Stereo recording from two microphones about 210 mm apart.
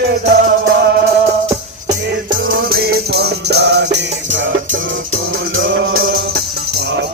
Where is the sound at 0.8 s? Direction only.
50° right (ahead or behind).